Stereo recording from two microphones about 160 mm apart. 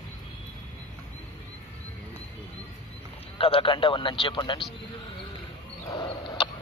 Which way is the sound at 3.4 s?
35° left (ahead or behind).